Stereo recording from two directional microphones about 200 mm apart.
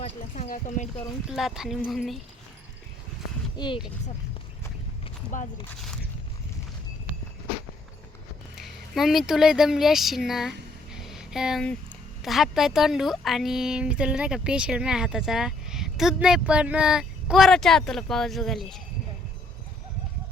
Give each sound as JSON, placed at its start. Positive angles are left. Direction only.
{"t": 0.0, "sound": "speech", "side_deg": 40}
{"t": 1.3, "sound": "a woman's voice", "side_deg": 0}
{"t": 3.6, "sound": "speech", "side_deg": 20}
{"t": 5.3, "sound": "speech", "side_deg": 40}
{"t": 8.5, "sound": "speech", "side_deg": 0}
{"t": 10.9, "sound": "a sound", "side_deg": 0}
{"t": 12.2, "sound": "a woman's voice", "side_deg": 0}